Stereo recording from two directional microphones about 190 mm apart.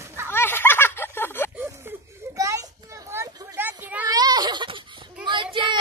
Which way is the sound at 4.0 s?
20° right (ahead or behind).